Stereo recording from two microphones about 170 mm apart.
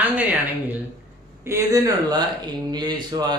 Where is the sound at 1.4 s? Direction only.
20° right (ahead or behind).